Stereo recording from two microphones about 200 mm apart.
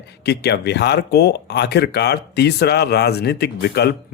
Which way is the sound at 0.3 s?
55° left (ahead or behind).